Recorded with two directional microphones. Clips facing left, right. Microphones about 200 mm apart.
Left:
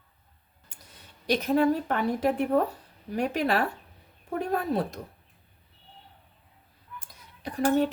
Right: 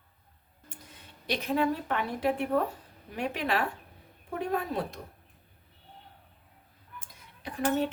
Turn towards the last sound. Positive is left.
turn(degrees=40)  # may be behind; listen again after turning